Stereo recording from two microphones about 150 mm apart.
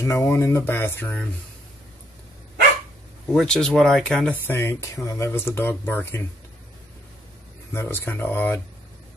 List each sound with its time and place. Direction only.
0.0 s speech: 15° left (ahead or behind)
3.3 s speech: 5° left (ahead or behind)
7.7 s speech: 15° left (ahead or behind)